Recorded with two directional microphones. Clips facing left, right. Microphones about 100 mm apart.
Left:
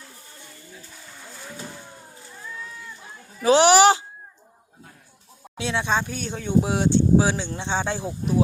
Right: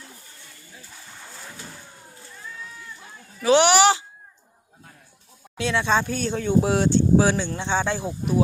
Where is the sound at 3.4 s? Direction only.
35° left (ahead or behind).